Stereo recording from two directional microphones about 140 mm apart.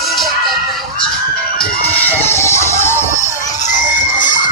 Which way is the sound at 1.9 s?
10° left (ahead or behind).